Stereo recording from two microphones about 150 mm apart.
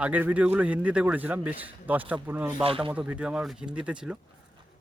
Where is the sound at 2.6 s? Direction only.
35° right (ahead or behind).